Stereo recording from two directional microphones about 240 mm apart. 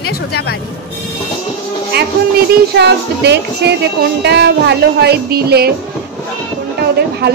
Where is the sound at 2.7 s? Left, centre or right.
Right.